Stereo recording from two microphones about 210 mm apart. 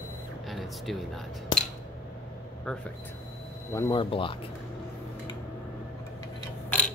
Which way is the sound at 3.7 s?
20° left (ahead or behind).